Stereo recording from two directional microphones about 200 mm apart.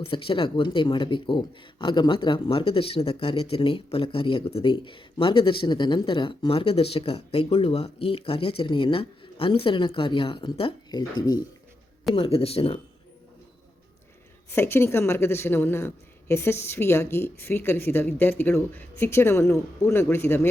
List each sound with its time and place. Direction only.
0.0 s speech: 25° left (ahead or behind)
12.1 s speech: 30° left (ahead or behind)
14.5 s a woman's voice: 10° left (ahead or behind)